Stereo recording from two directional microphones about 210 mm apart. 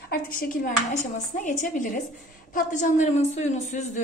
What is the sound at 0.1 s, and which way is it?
Speech, 45° left (ahead or behind).